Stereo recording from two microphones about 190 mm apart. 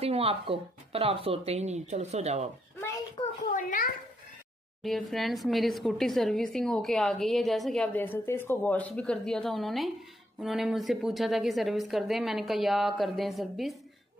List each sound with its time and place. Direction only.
0.0 s speech: 30° right (ahead or behind)
3.5 s speech: 45° left (ahead or behind)
4.8 s a woman's voice: centre (ahead or behind)